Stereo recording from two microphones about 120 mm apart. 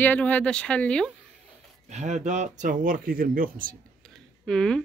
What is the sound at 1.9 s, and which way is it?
Speech, 75° right (ahead or behind).